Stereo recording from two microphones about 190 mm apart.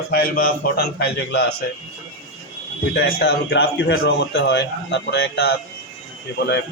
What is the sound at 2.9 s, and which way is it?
Speech, 60° left (ahead or behind).